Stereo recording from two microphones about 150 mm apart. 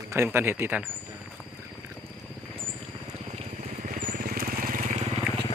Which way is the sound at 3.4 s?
50° right (ahead or behind).